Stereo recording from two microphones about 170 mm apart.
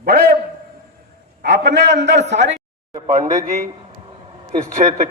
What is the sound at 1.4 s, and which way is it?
Speech, 90° right.